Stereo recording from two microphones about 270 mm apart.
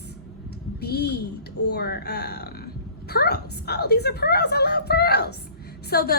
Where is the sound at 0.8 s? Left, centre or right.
Left.